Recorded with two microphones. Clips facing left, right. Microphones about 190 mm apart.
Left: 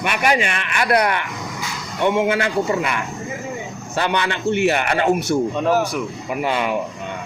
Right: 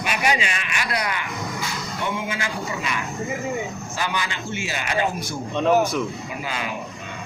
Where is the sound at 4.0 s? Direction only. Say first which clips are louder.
Left 7 dB; 65° left (ahead or behind).